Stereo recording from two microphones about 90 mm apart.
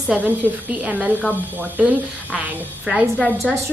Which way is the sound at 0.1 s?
20° right (ahead or behind).